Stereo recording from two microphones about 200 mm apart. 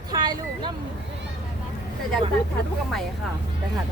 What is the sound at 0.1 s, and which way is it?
Vehicle, 20° right (ahead or behind).